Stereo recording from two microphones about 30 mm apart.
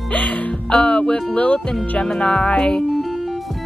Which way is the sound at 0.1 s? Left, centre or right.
Left.